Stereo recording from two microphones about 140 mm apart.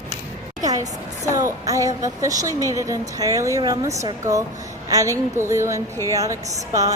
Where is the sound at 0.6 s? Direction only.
25° right (ahead or behind).